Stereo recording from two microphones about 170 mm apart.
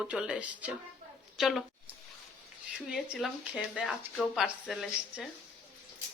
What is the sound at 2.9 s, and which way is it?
Speech, 5° right (ahead or behind).